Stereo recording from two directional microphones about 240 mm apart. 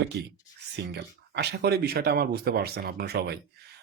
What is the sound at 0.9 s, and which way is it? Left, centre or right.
Speech, right.